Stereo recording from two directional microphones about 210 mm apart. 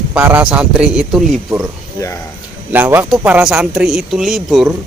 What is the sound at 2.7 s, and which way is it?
Speech, 10° right (ahead or behind).